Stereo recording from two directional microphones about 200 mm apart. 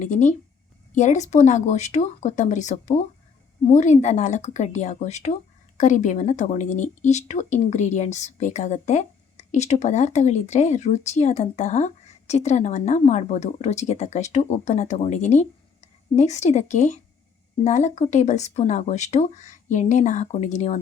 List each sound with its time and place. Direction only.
0.0 s speech: 40° left (ahead or behind)